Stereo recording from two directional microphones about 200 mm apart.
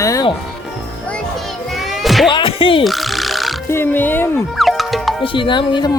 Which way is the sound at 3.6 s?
10° left (ahead or behind).